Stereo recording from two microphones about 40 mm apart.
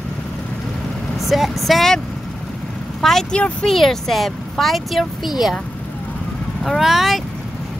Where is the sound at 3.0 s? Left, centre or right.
Centre.